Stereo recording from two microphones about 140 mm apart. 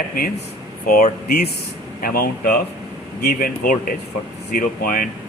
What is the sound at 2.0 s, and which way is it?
Speech, 90° left.